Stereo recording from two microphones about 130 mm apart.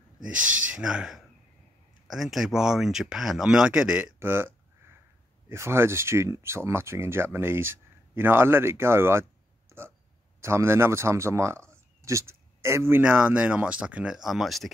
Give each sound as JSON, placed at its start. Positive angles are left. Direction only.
{"t": 0.7, "sound": "speech", "side_deg": -5}
{"t": 5.5, "sound": "speech", "side_deg": -20}
{"t": 9.7, "sound": "hiccup", "side_deg": -20}
{"t": 10.4, "sound": "speech", "side_deg": -20}